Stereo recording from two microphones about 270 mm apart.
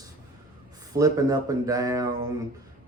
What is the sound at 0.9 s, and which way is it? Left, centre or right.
Speech, centre.